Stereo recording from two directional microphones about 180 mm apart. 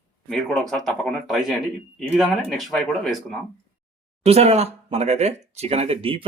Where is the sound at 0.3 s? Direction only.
Centre (ahead or behind).